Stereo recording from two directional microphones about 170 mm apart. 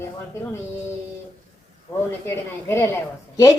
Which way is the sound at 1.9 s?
15° left (ahead or behind).